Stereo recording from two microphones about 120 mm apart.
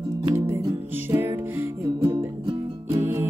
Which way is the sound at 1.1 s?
20° right (ahead or behind).